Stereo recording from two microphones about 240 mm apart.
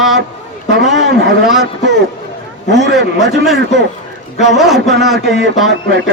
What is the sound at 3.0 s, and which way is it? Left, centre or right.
Speech, right.